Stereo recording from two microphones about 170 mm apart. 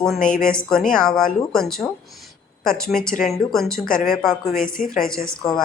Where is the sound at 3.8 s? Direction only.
55° left (ahead or behind).